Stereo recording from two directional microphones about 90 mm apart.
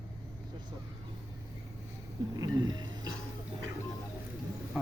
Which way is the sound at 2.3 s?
45° right (ahead or behind).